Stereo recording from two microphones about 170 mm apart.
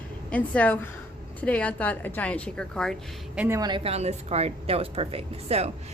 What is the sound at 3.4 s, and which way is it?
A woman's voice, 15° right (ahead or behind).